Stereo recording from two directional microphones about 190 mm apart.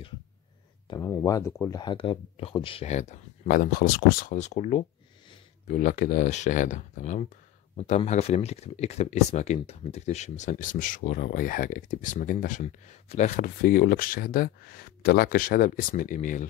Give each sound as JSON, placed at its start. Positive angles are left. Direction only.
{"t": 0.8, "sound": "speech", "side_deg": 15}
{"t": 3.4, "sound": "speech", "side_deg": 50}